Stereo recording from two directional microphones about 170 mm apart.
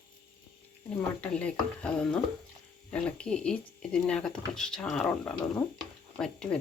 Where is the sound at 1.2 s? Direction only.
5° left (ahead or behind).